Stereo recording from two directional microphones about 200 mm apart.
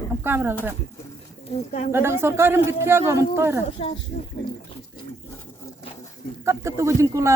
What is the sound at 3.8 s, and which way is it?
Speech, 30° left (ahead or behind).